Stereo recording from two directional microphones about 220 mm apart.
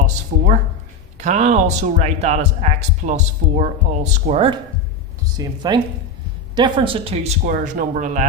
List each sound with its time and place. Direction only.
0.0 s speech: 35° right (ahead or behind)
5.2 s speech: 15° right (ahead or behind)
7.4 s speech: 35° right (ahead or behind)